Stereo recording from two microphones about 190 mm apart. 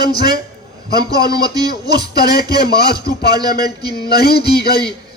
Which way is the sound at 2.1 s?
55° left (ahead or behind).